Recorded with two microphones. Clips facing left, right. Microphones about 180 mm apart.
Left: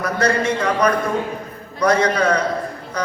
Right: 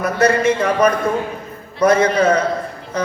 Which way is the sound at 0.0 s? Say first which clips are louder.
Right 4 dB; 25° right (ahead or behind).